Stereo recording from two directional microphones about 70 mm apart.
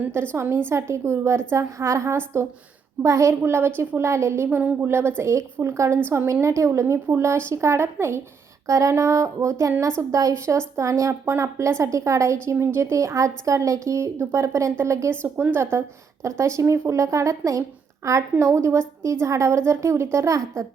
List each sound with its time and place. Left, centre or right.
0.3 s a woman's voice: right
3.0 s a woman's voice: right
8.6 s a woman's voice: right
15.2 s a woman's voice: right
16.2 s a woman's voice: right